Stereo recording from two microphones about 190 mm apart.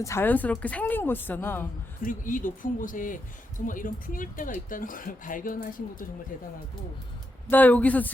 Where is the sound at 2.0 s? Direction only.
45° left (ahead or behind).